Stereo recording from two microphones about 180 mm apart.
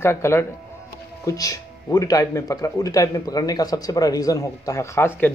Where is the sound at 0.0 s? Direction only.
15° left (ahead or behind).